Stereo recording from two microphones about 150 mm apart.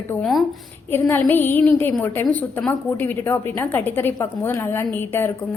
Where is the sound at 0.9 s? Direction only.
15° left (ahead or behind).